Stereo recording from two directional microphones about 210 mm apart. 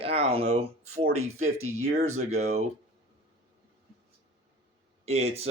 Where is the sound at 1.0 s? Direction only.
90° right.